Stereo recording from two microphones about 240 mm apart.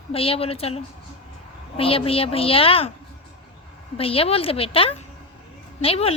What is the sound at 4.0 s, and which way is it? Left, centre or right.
A woman's voice, left.